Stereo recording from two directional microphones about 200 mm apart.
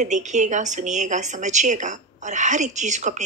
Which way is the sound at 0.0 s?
35° right (ahead or behind).